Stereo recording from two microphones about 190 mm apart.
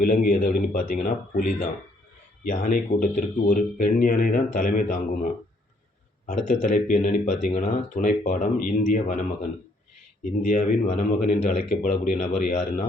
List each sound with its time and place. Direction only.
0.0 s speech: 45° left (ahead or behind)
10.5 s speech: 40° left (ahead or behind)